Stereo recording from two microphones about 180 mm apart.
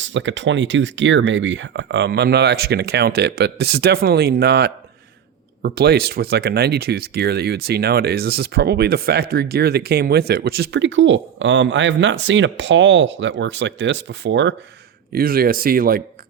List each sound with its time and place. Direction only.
0.0 s speech: 90° right
15.1 s speech: 55° right (ahead or behind)